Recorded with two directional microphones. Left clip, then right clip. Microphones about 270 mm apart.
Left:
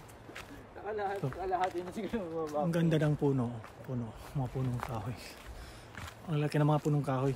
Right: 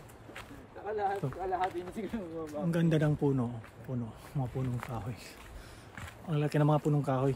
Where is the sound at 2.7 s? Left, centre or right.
Centre.